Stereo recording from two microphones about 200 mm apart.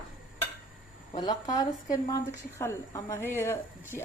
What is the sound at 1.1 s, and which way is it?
Speech, 20° left (ahead or behind).